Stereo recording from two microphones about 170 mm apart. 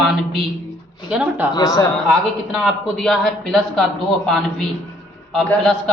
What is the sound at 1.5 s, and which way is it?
Speech, 25° left (ahead or behind).